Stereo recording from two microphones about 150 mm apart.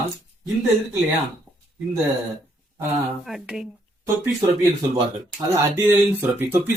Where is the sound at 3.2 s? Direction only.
5° right (ahead or behind).